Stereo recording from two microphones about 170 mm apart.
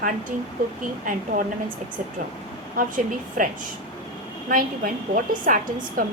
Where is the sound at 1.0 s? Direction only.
50° right (ahead or behind).